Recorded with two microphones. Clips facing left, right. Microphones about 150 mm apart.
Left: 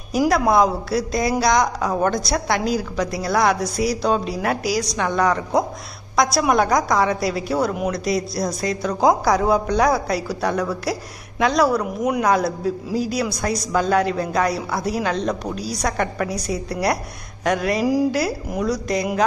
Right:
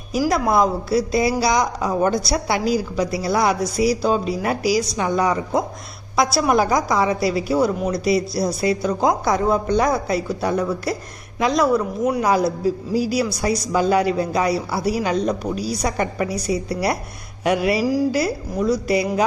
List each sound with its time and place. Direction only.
0.3 s a man's voice: centre (ahead or behind)
17.4 s a sound: 10° right (ahead or behind)
17.8 s speech: 15° left (ahead or behind)
18.1 s a man's voice: centre (ahead or behind)